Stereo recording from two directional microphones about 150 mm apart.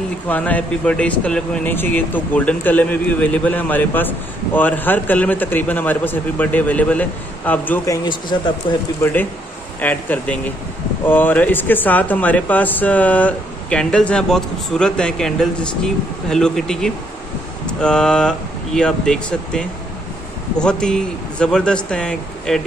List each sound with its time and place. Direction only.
0.3 s speech: 10° left (ahead or behind)
7.9 s speech: 30° left (ahead or behind)
9.0 s speech: 10° left (ahead or behind)